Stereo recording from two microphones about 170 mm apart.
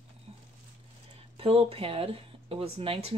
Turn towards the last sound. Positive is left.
turn(degrees=-35)  # may be behind; listen again after turning